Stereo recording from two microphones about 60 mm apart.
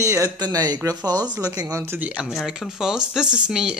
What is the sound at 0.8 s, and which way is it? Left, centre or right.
Speech, right.